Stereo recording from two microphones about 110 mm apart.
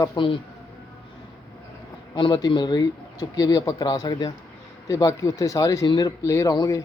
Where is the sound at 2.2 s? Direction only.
40° left (ahead or behind).